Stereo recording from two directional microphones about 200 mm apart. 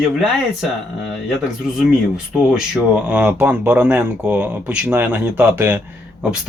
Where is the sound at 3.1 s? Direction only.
5° right (ahead or behind).